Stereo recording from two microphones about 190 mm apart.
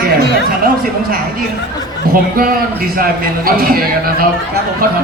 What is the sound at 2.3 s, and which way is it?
A man's voice, 50° right (ahead or behind).